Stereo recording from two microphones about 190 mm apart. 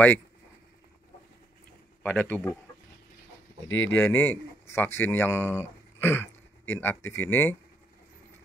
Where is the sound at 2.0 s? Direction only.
10° left (ahead or behind).